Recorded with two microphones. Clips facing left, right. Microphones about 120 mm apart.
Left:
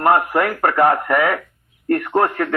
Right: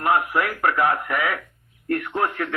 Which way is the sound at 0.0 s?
50° left (ahead or behind).